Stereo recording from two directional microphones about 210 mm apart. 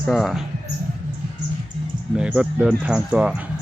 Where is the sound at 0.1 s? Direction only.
Centre (ahead or behind).